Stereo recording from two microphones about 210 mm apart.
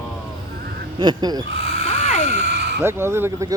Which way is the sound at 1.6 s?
50° right (ahead or behind).